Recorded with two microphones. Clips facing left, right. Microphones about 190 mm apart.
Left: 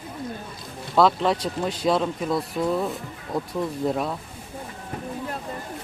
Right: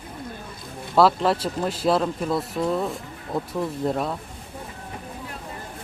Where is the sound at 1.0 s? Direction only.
5° right (ahead or behind).